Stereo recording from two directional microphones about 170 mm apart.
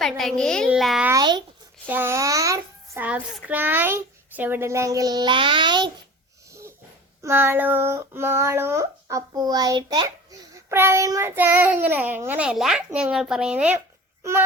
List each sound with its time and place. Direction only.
0.0 s a child's voice: 5° left (ahead or behind)
1.2 s speech: 25° right (ahead or behind)
1.9 s speech: 15° right (ahead or behind)
6.5 s wheeze: 15° right (ahead or behind)
7.2 s speech: 15° right (ahead or behind)